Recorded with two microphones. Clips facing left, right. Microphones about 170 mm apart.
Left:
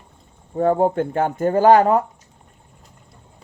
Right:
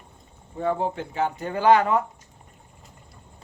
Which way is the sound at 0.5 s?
45° left (ahead or behind).